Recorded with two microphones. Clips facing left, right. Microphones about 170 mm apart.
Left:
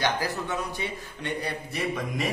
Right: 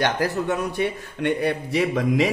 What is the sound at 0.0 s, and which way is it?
A man's voice, 60° right (ahead or behind).